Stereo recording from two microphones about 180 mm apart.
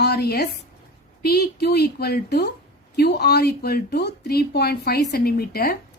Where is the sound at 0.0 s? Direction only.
65° left (ahead or behind).